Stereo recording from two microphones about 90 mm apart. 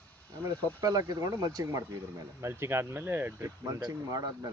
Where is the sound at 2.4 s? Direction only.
30° right (ahead or behind); by 4.5 s 45° right (ahead or behind).